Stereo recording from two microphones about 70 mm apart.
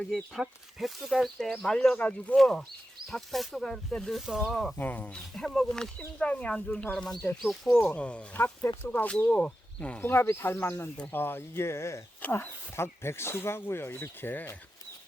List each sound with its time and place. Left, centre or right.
0.0 s speech: centre
1.6 s speech: centre
2.3 s speech: centre
4.3 s speech: centre
4.8 s speech: left
5.4 s speech: centre
6.9 s speech: centre
7.9 s speech: centre
10.0 s speech: left